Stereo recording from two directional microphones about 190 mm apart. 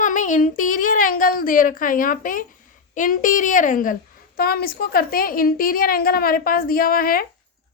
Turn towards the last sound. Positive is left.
turn(degrees=50)  # may be behind; listen again after turning